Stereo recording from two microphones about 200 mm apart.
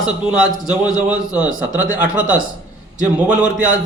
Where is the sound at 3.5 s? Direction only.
40° right (ahead or behind).